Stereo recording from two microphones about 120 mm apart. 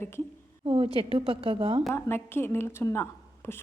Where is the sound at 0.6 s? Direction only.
50° right (ahead or behind).